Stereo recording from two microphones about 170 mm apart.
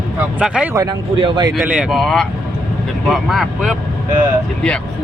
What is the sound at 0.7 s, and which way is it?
Speech, 20° right (ahead or behind).